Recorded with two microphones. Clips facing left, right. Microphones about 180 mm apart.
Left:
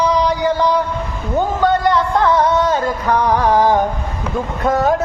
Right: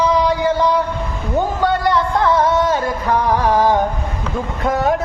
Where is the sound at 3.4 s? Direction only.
20° left (ahead or behind).